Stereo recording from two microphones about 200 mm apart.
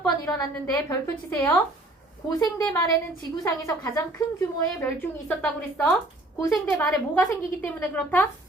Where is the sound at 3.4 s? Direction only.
15° left (ahead or behind).